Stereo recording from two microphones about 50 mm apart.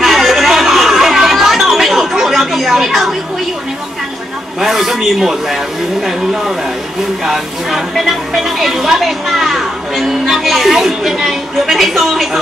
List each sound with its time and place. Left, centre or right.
0.0 s chatter: centre
4.6 s speech: centre
7.2 s speech: centre